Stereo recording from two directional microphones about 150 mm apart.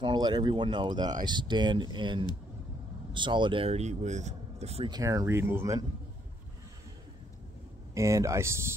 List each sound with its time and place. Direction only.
0.0 s speech: 30° right (ahead or behind); by 4.8 s 45° right (ahead or behind)
4.8 s speech: 25° right (ahead or behind)
7.9 s speech: 20° right (ahead or behind)